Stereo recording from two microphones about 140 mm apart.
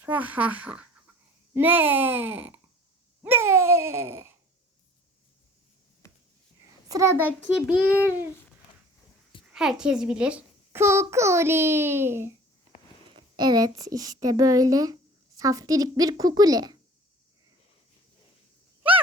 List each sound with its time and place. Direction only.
0.0 s a child's voice: 10° right (ahead or behind)
3.2 s babbling: 15° right (ahead or behind)
6.0 s a sound: 20° left (ahead or behind)
6.8 s a child's voice: 25° right (ahead or behind)
7.5 s a child's voice: 10° right (ahead or behind)
9.5 s a child's voice: 5° right (ahead or behind)
10.7 s a child's voice: 20° right (ahead or behind)
13.1 s a woman's voice: 35° right (ahead or behind)